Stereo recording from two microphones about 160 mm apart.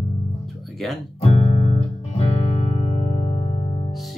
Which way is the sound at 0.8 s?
Centre (ahead or behind).